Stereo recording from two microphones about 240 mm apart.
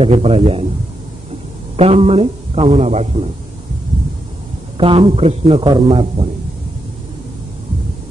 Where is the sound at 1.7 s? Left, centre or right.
Right.